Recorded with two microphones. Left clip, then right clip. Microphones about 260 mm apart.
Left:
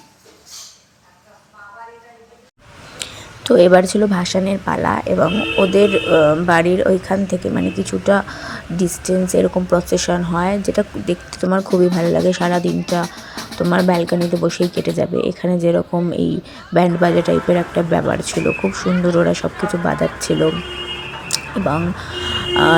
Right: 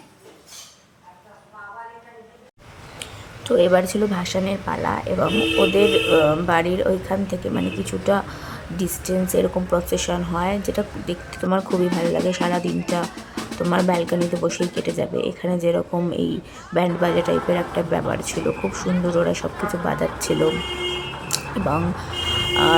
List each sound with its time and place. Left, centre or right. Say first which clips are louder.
3.0 s speech: left 7 dB; left